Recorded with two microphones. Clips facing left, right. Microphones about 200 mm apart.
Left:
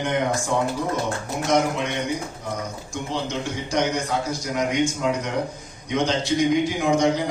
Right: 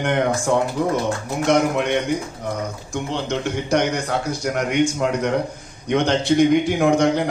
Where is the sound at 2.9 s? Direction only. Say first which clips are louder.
Right 3 dB; 60° right (ahead or behind).